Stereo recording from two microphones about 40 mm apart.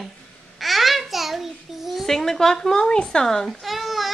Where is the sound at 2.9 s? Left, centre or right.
Left.